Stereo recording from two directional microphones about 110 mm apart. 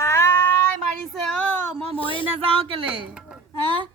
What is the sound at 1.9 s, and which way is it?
Speech, 55° left (ahead or behind).